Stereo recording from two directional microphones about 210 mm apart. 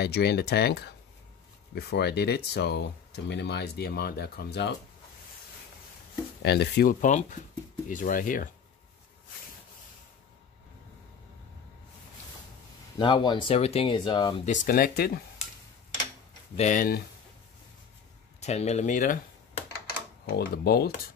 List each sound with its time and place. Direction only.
0.0 s speech: 50° left (ahead or behind)
6.4 s speech: 50° left (ahead or behind)
13.0 s speech: 20° left (ahead or behind)
14.5 s speech: 40° left (ahead or behind)
16.5 s speech: 35° left (ahead or behind)
18.4 s speech: 30° left (ahead or behind)
20.3 s speech: 45° left (ahead or behind)